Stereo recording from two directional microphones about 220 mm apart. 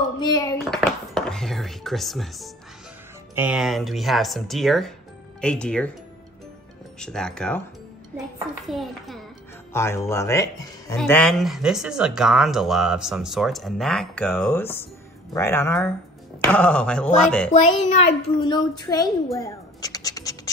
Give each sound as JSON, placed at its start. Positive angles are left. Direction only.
{"t": 0.2, "sound": "speech", "side_deg": 20}
{"t": 0.7, "sound": "a sound", "side_deg": 0}
{"t": 3.3, "sound": "speech", "side_deg": -5}
{"t": 7.0, "sound": "speech", "side_deg": 5}
{"t": 8.6, "sound": "speech", "side_deg": 0}
{"t": 9.7, "sound": "speech", "side_deg": 10}
{"t": 17.5, "sound": "a child's voice", "side_deg": 30}
{"t": 18.5, "sound": "speech", "side_deg": 15}
{"t": 19.3, "sound": "scratch", "side_deg": 15}